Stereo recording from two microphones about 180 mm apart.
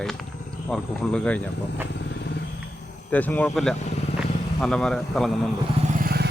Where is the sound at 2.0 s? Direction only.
70° left (ahead or behind).